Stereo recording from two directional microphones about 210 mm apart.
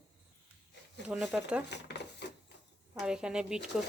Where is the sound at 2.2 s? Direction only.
55° left (ahead or behind).